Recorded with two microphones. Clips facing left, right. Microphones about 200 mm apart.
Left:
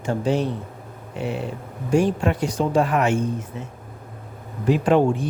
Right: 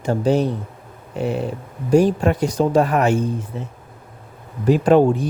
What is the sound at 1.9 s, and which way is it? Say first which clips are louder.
Speech: right 4 dB; 40° right (ahead or behind).